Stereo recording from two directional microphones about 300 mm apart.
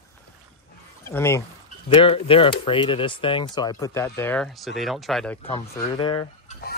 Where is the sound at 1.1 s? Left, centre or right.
Centre.